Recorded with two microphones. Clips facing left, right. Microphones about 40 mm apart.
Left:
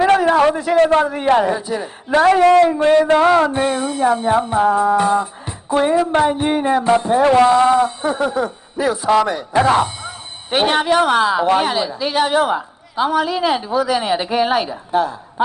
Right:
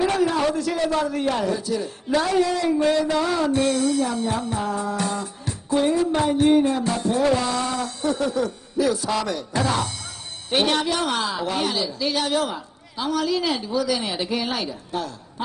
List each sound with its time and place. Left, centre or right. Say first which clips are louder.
0.0 s a sound: left 8 dB; left
0.7 s speech: left 10 dB; left
1.0 s speech: left 8 dB; left
2.1 s a man's voice: left 10 dB; left
2.8 s a man's voice: left 8 dB; left
3.4 s speech: left 2 dB; left
7.3 s speech: left 13 dB; left
9.6 s speech: left 10 dB; left
10.0 s speech: left 5 dB; left